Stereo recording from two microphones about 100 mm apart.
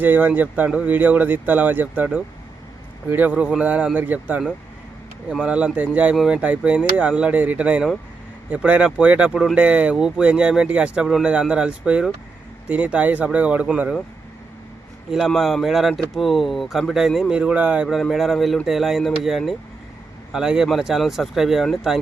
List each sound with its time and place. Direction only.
0.0 s speech: 20° right (ahead or behind)
15.1 s speech: centre (ahead or behind)
17.8 s speech: centre (ahead or behind)